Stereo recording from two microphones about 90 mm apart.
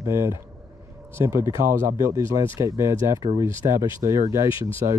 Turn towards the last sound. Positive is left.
turn(degrees=-90)